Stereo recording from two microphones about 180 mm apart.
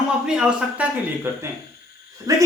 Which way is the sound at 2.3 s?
20° right (ahead or behind).